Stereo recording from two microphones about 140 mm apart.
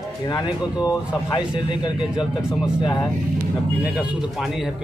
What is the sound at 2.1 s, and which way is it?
Speech, 5° right (ahead or behind).